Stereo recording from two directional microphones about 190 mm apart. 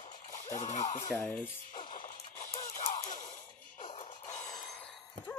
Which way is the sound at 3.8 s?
30° left (ahead or behind).